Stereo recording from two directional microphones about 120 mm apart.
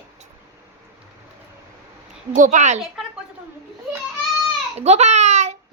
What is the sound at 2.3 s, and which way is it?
Speech, 90° right.